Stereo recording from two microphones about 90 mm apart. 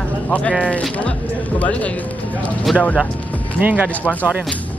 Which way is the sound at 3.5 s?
20° right (ahead or behind).